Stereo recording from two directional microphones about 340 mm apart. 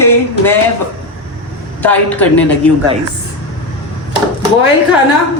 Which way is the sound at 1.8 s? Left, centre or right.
Centre.